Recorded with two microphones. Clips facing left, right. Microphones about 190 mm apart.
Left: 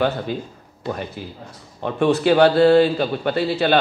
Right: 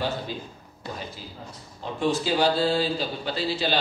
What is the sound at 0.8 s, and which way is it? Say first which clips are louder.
A man's voice: left 9 dB; 60° left (ahead or behind).